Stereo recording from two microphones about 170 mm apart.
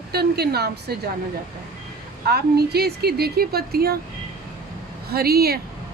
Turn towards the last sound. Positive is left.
turn(degrees=-65)  # may be behind; listen again after turning